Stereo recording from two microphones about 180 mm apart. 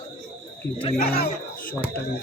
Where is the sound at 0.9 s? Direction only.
60° left (ahead or behind).